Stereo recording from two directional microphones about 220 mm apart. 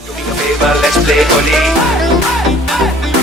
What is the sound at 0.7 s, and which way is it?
Music, centre (ahead or behind).